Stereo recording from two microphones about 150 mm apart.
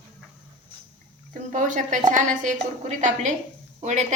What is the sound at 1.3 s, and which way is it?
A woman's voice, 55° right (ahead or behind).